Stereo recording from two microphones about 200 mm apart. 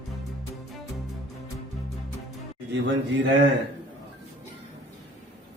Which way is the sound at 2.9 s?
65° right (ahead or behind).